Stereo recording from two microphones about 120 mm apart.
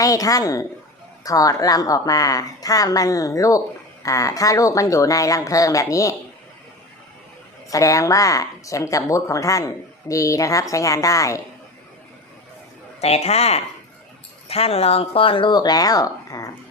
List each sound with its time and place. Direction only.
0.0 s a woman's voice: 30° left (ahead or behind)
7.7 s a woman's voice: 25° left (ahead or behind)
13.0 s a man's voice: 60° left (ahead or behind); by 16.5 s 30° left (ahead or behind)